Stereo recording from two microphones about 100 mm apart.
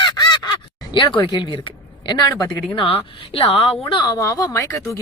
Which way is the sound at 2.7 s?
70° left (ahead or behind).